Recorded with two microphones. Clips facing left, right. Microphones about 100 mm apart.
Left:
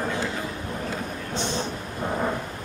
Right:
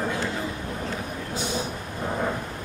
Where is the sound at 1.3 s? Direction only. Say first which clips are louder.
Left 1 dB; 10° right (ahead or behind).